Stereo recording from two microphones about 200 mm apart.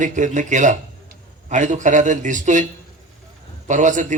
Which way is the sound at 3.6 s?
40° right (ahead or behind).